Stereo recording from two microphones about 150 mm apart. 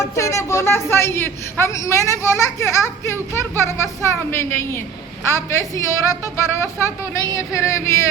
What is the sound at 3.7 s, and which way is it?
Speech, 15° left (ahead or behind).